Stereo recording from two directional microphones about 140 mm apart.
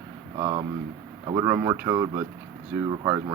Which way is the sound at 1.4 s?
20° right (ahead or behind).